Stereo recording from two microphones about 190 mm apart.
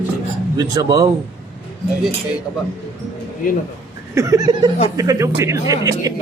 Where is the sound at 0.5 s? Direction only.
20° right (ahead or behind).